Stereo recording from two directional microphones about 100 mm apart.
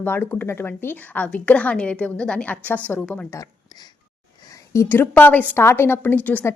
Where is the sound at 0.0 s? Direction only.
20° left (ahead or behind).